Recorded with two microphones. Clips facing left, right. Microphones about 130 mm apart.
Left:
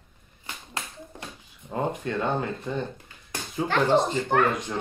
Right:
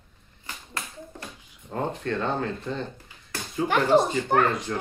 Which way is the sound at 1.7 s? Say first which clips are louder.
Even; 10° left (ahead or behind).